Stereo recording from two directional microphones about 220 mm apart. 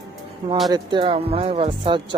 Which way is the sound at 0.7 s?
20° right (ahead or behind).